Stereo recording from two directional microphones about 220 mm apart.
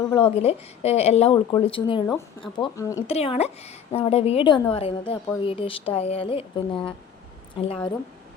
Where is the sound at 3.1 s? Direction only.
30° left (ahead or behind).